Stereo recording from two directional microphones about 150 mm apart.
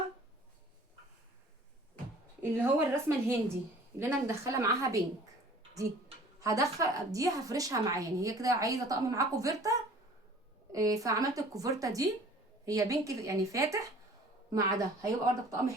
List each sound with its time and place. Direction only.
2.4 s a woman's voice: 15° right (ahead or behind)
6.4 s a woman's voice: 25° right (ahead or behind)